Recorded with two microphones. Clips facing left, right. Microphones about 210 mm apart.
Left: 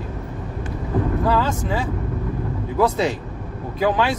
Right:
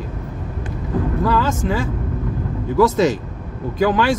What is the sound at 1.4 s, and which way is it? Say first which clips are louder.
Speech: right 3 dB; 90° right.